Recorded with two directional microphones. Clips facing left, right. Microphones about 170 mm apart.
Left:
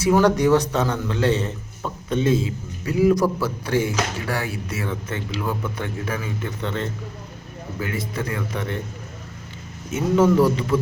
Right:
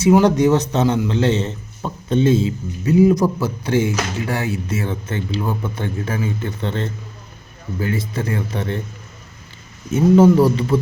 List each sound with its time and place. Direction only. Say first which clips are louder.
0.0 s a man's voice: right 4 dB; 20° right (ahead or behind)
9.9 s speech: right 6 dB; 30° right (ahead or behind)